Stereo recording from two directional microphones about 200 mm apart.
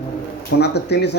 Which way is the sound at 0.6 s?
55° left (ahead or behind).